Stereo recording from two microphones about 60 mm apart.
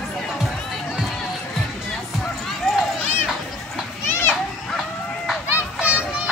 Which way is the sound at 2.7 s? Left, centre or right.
Centre.